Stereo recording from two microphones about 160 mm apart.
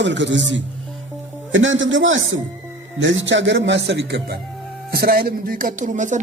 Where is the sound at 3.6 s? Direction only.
90° right.